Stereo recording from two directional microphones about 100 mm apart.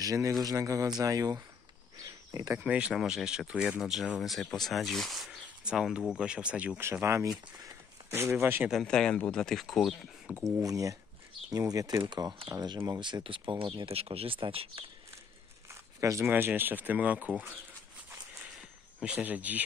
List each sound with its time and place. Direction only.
0.0 s speech: 35° right (ahead or behind)
2.0 s cricket: 35° right (ahead or behind)
2.6 s speech: 10° right (ahead or behind)
6.8 s speech: 25° right (ahead or behind)
7.2 s speech: 40° right (ahead or behind)
8.1 s speech: 25° right (ahead or behind)
8.8 s speech: 10° left (ahead or behind)
10.6 s speech: 35° right (ahead or behind)
12.0 s speech: 50° right (ahead or behind)
13.0 s speech: 55° right (ahead or behind)
15.7 s a sound: 30° right (ahead or behind)
16.3 s speech: 20° right (ahead or behind)
18.5 s a sound: 10° right (ahead or behind)